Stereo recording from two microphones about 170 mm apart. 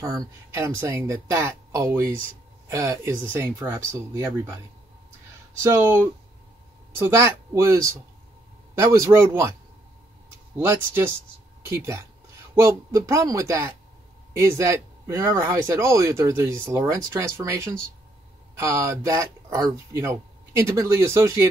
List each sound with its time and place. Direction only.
0.0 s speech: 20° right (ahead or behind)
5.6 s speech: 15° right (ahead or behind)
7.1 s speech: 15° right (ahead or behind)
10.6 s speech: 15° right (ahead or behind)